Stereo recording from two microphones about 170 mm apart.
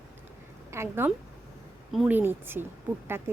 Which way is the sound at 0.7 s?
15° right (ahead or behind).